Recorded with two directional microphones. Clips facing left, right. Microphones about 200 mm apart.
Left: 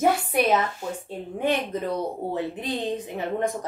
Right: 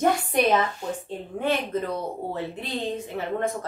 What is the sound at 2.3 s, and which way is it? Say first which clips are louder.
Speech: left 3 dB; 15° left (ahead or behind).